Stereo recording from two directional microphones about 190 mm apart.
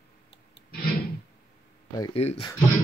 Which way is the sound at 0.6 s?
30° left (ahead or behind).